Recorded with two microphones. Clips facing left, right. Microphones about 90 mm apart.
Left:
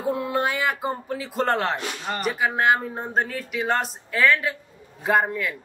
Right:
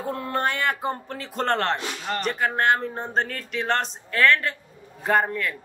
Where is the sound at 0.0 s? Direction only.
5° left (ahead or behind).